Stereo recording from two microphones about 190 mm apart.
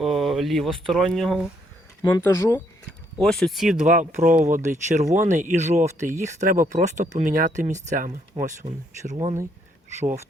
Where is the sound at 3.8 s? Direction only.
40° right (ahead or behind).